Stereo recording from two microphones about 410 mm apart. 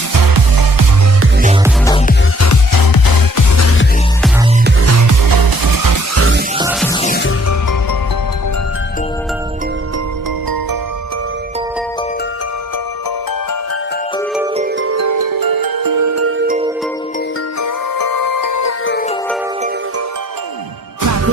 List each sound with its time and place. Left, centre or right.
0.1 s music: right
2.4 s music: left
3.6 s music: left
4.6 s music: right
6.1 s music: right
6.6 s music: centre
6.8 s music: centre
14.8 s music: right
16.4 s music: centre
17.6 s music: left
18.9 s music: left
21.0 s music: right